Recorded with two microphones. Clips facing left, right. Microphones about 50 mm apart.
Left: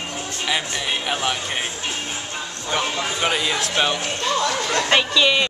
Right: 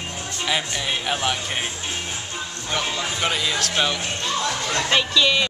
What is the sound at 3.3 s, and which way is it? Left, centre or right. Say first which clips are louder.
Speech: left 2 dB; centre.